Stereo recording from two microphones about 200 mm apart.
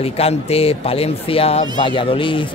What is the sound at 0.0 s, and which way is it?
A man's voice, 30° left (ahead or behind).